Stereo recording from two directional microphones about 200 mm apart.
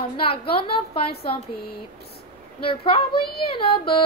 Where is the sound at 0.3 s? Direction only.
25° left (ahead or behind).